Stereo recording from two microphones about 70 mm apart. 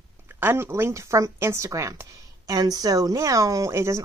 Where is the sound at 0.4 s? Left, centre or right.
Right.